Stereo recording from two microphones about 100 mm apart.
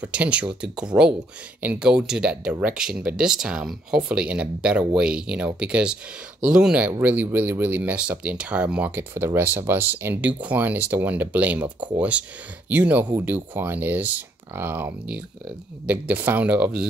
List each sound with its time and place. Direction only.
0.0 s speech: 10° right (ahead or behind)
7.0 s speech: 20° right (ahead or behind)